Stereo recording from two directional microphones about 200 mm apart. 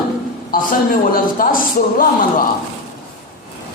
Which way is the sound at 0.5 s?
45° left (ahead or behind).